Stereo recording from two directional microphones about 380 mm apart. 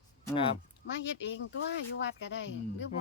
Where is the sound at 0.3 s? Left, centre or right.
Centre.